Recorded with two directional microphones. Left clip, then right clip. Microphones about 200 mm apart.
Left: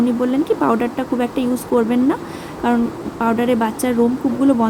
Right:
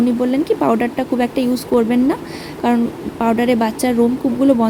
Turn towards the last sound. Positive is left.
turn(degrees=-20)  # may be behind; listen again after turning